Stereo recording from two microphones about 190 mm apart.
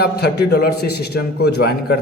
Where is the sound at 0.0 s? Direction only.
55° left (ahead or behind).